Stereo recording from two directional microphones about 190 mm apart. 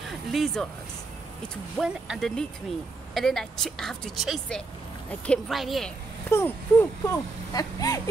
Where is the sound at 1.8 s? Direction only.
Centre (ahead or behind).